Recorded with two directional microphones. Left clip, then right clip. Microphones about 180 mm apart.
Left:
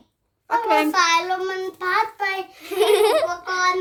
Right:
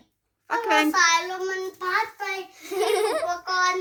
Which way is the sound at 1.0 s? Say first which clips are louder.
Left 2 dB; 25° left (ahead or behind).